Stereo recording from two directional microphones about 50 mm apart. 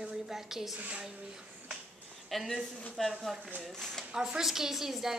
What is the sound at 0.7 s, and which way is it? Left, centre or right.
Speech, right.